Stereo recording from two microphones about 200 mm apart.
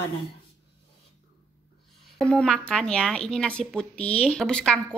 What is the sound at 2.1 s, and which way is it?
Speech, 5° left (ahead or behind).